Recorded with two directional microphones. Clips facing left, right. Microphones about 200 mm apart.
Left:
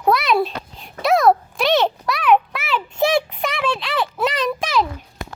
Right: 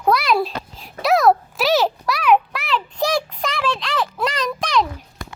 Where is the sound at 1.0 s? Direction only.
Centre (ahead or behind).